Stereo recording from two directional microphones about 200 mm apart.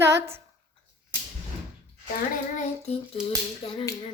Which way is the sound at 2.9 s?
30° left (ahead or behind).